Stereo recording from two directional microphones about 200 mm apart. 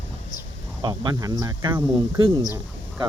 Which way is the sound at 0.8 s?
20° right (ahead or behind).